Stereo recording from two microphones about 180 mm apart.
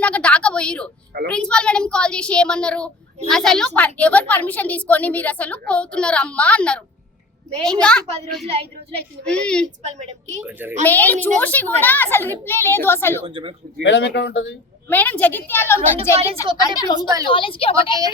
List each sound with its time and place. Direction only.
0.0 s a sound: 5° left (ahead or behind)
1.3 s a woman's voice: 5° left (ahead or behind)
9.8 s a woman's voice: 40° right (ahead or behind)
10.4 s a child's voice: 10° right (ahead or behind)
10.8 s a woman's voice: 10° left (ahead or behind)
13.2 s speech: 30° right (ahead or behind)
13.8 s a man's voice: 90° left
14.8 s a woman's voice: 10° left (ahead or behind); by 18.0 s 30° left (ahead or behind)